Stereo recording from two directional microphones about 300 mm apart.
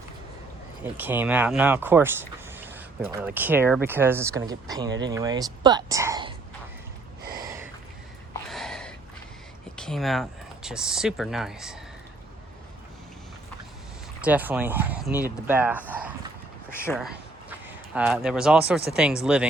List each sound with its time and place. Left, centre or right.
0.9 s speech: centre
4.9 s speech: right
5.1 s speech: centre
7.3 s gasp: centre
8.3 s a sound: centre
9.7 s speech: centre
14.2 s speech: centre
15.9 s a sound: centre
16.7 s speech: centre